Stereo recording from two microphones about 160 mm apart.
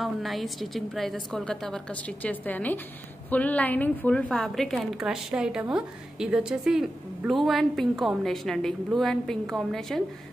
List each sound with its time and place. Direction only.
0.0 s a woman's voice: centre (ahead or behind)